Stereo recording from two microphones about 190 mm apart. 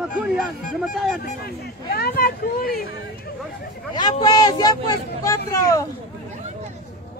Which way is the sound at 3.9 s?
20° left (ahead or behind).